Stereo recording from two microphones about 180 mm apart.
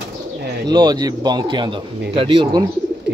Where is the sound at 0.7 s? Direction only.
25° right (ahead or behind).